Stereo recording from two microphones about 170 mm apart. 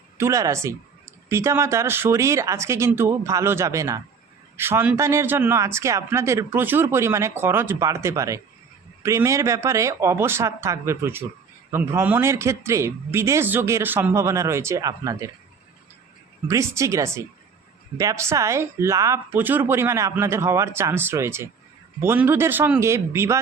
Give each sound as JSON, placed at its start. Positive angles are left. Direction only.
{"t": 0.2, "sound": "speech", "side_deg": -20}
{"t": 16.5, "sound": "speech", "side_deg": -15}